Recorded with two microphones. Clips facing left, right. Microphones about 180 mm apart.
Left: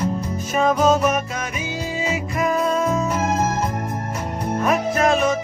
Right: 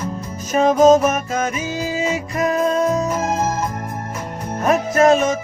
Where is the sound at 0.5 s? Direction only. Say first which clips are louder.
Right 6 dB; 40° right (ahead or behind).